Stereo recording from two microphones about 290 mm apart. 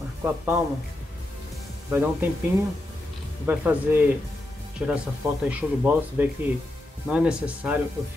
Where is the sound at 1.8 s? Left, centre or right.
Centre.